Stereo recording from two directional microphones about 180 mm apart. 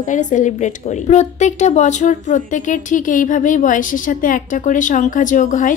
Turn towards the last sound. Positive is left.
turn(degrees=45)  # may be behind; listen again after turning